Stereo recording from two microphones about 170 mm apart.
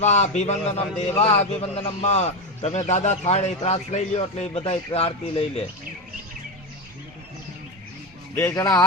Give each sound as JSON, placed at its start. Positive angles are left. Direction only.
{"t": 0.0, "sound": "a man's voice", "side_deg": 45}
{"t": 8.4, "sound": "speech", "side_deg": 15}